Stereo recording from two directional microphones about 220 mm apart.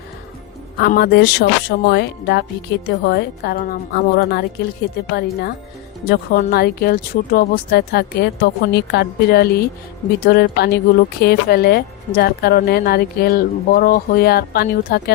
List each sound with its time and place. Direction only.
0.8 s speech: 45° left (ahead or behind)